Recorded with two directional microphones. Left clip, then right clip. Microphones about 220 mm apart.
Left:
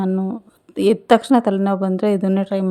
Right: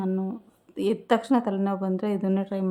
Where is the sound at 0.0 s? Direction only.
25° left (ahead or behind).